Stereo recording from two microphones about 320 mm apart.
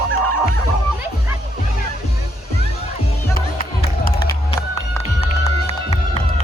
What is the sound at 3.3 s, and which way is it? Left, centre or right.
Music, left.